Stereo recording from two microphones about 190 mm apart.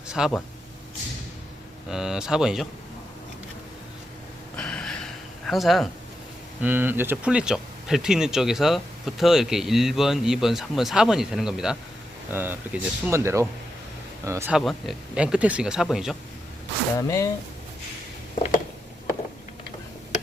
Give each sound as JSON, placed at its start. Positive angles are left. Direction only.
{"t": 0.1, "sound": "speech", "side_deg": 0}
{"t": 1.9, "sound": "speech", "side_deg": 0}
{"t": 4.5, "sound": "a sound", "side_deg": 5}
{"t": 6.6, "sound": "speech", "side_deg": -10}
{"t": 14.5, "sound": "speech", "side_deg": 0}
{"t": 17.0, "sound": "speech", "side_deg": 15}